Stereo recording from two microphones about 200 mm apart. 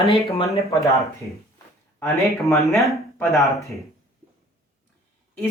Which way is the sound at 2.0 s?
15° left (ahead or behind).